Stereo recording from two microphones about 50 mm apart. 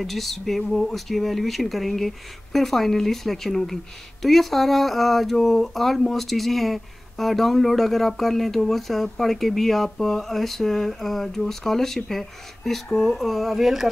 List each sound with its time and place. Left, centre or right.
0.0 s speech: centre